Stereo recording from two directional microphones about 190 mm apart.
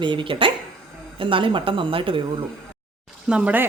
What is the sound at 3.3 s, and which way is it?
Speech, 5° right (ahead or behind).